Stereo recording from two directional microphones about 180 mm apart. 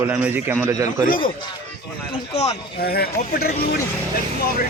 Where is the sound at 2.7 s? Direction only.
60° left (ahead or behind).